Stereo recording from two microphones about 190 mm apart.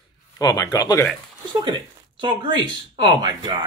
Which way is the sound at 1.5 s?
25° right (ahead or behind).